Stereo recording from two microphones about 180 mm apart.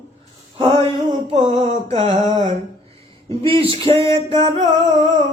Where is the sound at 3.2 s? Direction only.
30° right (ahead or behind).